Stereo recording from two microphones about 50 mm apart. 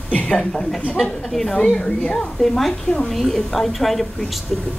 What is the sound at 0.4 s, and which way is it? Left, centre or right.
A woman's voice, centre.